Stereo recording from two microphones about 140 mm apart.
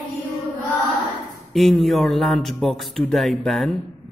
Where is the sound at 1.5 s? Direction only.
Centre (ahead or behind).